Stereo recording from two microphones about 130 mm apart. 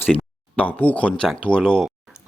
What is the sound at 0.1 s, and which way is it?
Speech, 10° left (ahead or behind).